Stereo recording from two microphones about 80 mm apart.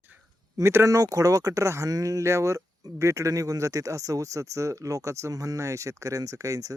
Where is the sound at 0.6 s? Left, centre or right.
Right.